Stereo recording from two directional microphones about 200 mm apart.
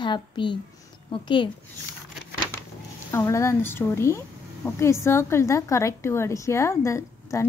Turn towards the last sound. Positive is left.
turn(degrees=15)  # may be behind; listen again after turning